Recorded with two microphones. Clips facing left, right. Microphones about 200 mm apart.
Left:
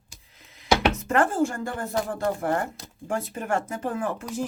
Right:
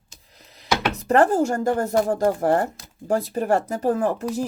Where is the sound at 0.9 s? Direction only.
35° right (ahead or behind).